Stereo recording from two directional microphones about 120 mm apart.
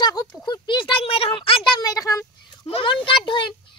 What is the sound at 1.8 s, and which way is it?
Speech, 30° left (ahead or behind).